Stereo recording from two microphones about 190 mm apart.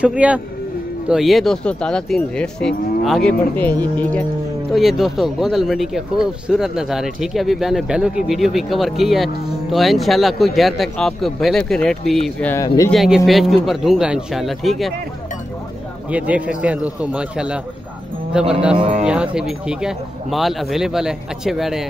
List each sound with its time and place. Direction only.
0.0 s speech: 5° right (ahead or behind); by 12.9 s 15° left (ahead or behind)
12.9 s speech: centre (ahead or behind)
16.1 s speech: 5° right (ahead or behind)
18.8 s speech: 30° right (ahead or behind)
19.0 s speech: 5° right (ahead or behind)